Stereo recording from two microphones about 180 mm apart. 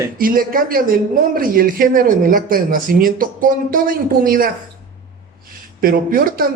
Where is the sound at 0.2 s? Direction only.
50° right (ahead or behind).